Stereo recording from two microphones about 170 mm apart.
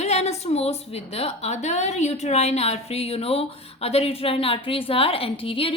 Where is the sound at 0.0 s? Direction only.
40° left (ahead or behind).